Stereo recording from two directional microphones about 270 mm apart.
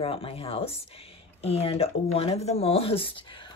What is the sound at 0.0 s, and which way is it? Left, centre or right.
Speech, left.